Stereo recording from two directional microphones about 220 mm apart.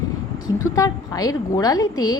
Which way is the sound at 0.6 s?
15° left (ahead or behind).